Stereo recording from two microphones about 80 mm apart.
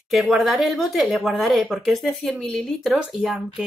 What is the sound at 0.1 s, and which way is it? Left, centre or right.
Speech, centre.